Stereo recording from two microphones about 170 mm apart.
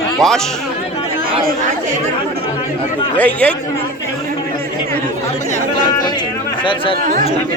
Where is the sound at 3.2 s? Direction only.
10° left (ahead or behind).